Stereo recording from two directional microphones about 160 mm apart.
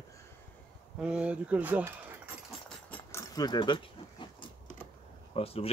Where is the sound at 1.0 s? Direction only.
5° right (ahead or behind).